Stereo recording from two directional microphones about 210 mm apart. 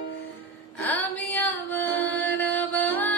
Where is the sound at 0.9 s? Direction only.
10° left (ahead or behind).